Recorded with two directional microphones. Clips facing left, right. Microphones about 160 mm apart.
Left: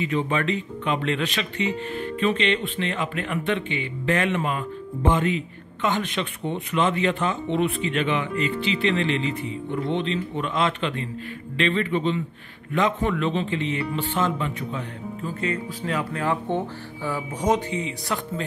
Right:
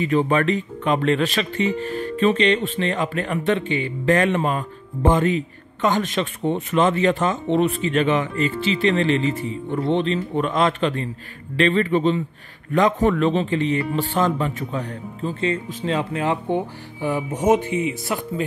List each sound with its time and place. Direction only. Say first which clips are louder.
0.0 s speech: right 5 dB; 45° right (ahead or behind)
15.2 s speech: right 5 dB; 25° right (ahead or behind)